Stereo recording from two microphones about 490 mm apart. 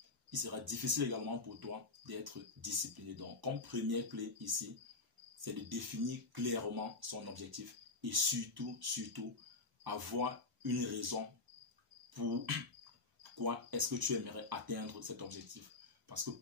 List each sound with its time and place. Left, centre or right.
0.3 s speech: right
12.1 s insect: right
13.2 s speech: right